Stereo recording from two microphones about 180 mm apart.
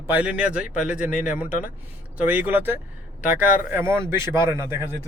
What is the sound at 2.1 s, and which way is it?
Speech, 10° right (ahead or behind).